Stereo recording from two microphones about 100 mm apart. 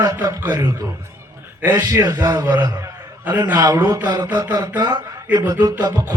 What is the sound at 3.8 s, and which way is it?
Speech, 20° right (ahead or behind).